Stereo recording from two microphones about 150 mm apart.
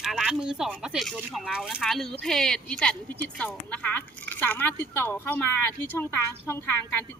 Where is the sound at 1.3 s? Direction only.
Centre (ahead or behind).